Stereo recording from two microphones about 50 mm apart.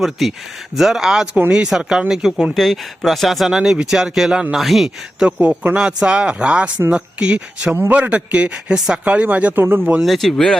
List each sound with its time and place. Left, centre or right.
0.0 s speech: centre
2.6 s speech: centre
5.5 s speech: centre
7.8 s a man's voice: right
8.1 s speech: right
9.1 s speech: right
9.6 s speech: right
10.0 s speech: centre